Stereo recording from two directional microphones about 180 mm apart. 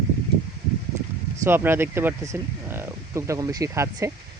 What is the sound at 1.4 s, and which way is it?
Speech, 10° right (ahead or behind).